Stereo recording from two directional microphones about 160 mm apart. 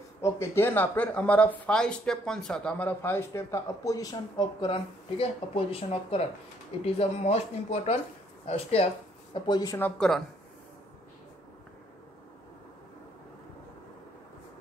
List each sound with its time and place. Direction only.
0.2 s speech: 15° left (ahead or behind); by 8.8 s 40° left (ahead or behind)
9.3 s speech: 25° left (ahead or behind)
9.8 s speech: 5° left (ahead or behind)